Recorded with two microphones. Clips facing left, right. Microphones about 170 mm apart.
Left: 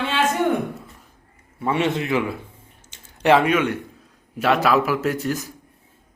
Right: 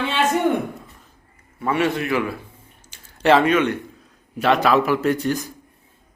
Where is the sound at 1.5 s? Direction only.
25° left (ahead or behind); by 5.5 s 5° left (ahead or behind).